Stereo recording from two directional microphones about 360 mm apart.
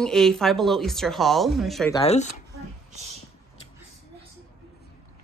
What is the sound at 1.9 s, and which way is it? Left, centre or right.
Speech, centre.